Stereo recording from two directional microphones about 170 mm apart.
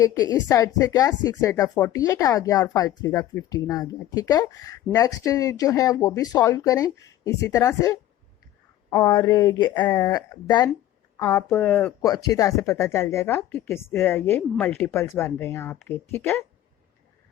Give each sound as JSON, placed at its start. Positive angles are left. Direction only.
{"t": 0.0, "sound": "speech", "side_deg": 20}
{"t": 11.2, "sound": "speech", "side_deg": 10}
{"t": 11.7, "sound": "speech", "side_deg": 15}